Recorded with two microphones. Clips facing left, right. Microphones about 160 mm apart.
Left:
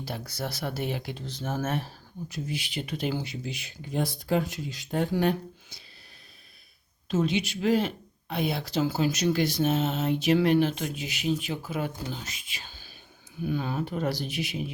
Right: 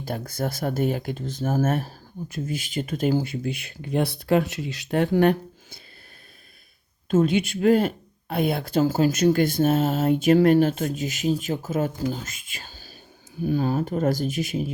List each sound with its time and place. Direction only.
0.0 s speech: 50° right (ahead or behind); by 5.0 s 75° right (ahead or behind)
5.1 s speech: 55° right (ahead or behind)
7.1 s speech: 50° right (ahead or behind)